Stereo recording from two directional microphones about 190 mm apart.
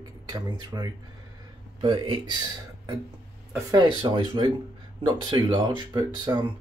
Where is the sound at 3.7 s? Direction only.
20° right (ahead or behind).